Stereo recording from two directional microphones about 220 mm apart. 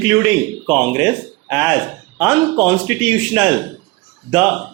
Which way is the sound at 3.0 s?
5° right (ahead or behind).